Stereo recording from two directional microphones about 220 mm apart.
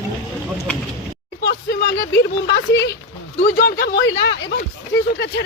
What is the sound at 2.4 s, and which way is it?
Speech, 50° left (ahead or behind).